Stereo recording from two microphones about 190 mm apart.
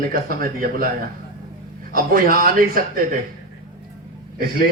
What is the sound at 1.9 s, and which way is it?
Speech, 45° right (ahead or behind).